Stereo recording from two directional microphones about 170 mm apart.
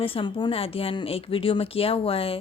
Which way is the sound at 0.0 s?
30° left (ahead or behind).